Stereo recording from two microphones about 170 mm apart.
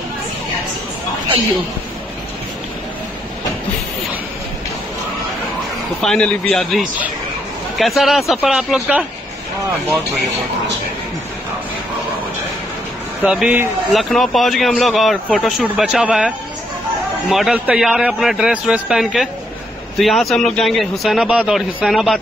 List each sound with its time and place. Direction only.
5.9 s a man's voice: 5° left (ahead or behind)
13.2 s a man's voice: 5° right (ahead or behind)